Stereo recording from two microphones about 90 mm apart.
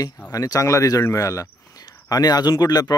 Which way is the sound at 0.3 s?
40° left (ahead or behind).